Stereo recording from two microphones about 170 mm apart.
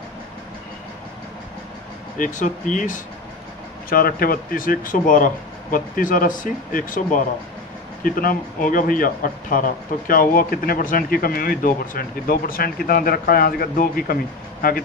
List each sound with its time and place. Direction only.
2.1 s speech: 50° left (ahead or behind)